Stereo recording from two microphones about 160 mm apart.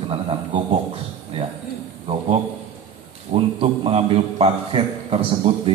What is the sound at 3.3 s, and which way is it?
A man's voice, 35° right (ahead or behind).